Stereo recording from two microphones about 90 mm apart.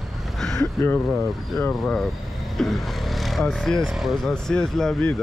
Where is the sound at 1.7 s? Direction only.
5° left (ahead or behind).